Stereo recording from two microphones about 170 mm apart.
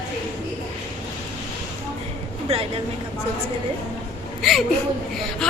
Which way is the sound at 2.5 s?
35° right (ahead or behind).